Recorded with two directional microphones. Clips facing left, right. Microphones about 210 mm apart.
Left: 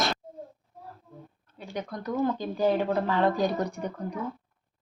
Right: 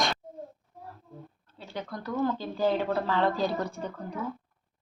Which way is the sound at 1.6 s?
15° left (ahead or behind).